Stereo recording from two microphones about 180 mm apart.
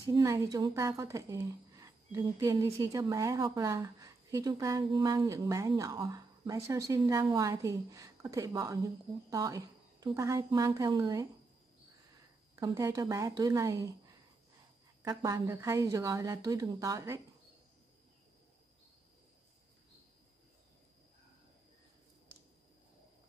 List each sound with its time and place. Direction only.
0.1 s a woman's voice: 20° right (ahead or behind)
12.5 s a woman's voice: 20° right (ahead or behind)
15.0 s a woman's voice: 20° right (ahead or behind)